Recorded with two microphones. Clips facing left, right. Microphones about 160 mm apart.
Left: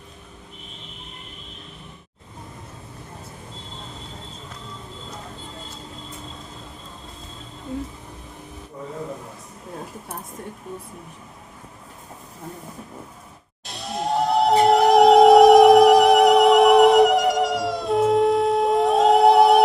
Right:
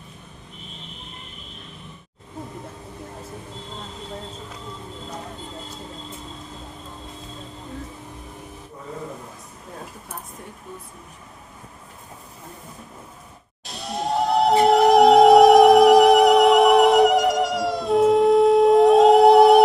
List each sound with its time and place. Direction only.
13.7 s music: centre (ahead or behind)